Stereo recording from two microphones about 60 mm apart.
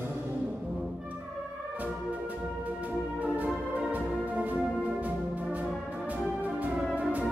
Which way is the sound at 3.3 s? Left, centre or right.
Right.